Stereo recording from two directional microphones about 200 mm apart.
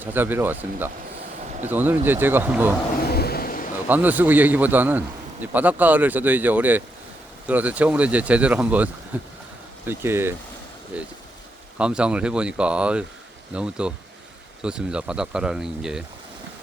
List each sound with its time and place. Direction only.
0.0 s a man's voice: 10° right (ahead or behind)
3.1 s a sound: 50° left (ahead or behind)
3.8 s a man's voice: 10° right (ahead or behind)